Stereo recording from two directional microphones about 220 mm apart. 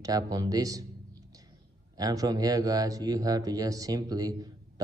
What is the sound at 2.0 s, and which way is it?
Speech, 15° right (ahead or behind).